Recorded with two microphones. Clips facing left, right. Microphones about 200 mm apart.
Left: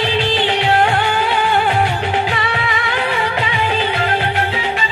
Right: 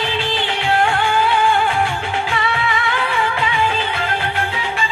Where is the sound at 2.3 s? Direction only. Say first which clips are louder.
Even; 20° left (ahead or behind).